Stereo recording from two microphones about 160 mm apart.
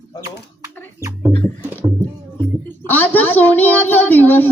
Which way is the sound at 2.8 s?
10° left (ahead or behind).